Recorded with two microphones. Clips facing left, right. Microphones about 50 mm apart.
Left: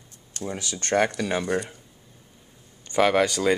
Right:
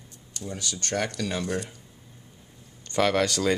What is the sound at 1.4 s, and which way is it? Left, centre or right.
Speech, centre.